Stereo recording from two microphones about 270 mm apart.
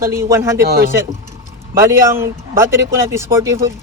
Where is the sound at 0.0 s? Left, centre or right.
Centre.